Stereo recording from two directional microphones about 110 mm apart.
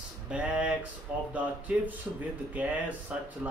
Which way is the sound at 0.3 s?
10° right (ahead or behind).